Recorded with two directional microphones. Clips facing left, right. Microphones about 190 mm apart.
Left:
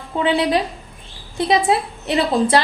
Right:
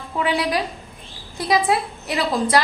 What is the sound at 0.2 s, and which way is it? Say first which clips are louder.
A woman's voice: left 4 dB; 25° left (ahead or behind).